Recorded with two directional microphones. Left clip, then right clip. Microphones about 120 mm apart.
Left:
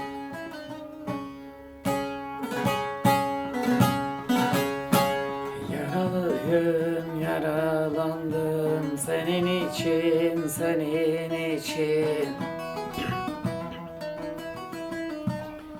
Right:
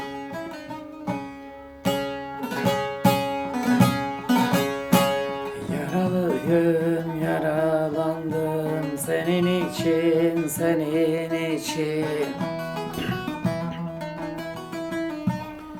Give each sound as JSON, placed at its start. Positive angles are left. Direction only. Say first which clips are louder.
{"t": 1.9, "sound": "music", "louder": "right 3 dB", "side_deg": -30}
{"t": 4.3, "sound": "music", "louder": "right 3 dB", "side_deg": -25}
{"t": 5.7, "sound": "music", "louder": "right 3 dB", "side_deg": -5}
{"t": 10.6, "sound": "music", "louder": "right 3 dB", "side_deg": -15}